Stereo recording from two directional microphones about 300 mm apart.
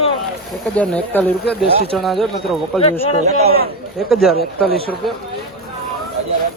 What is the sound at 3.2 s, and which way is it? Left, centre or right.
Speech, right.